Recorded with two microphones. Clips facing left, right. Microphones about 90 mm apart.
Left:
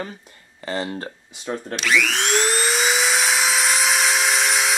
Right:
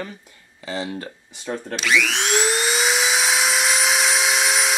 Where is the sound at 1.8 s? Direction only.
Centre (ahead or behind).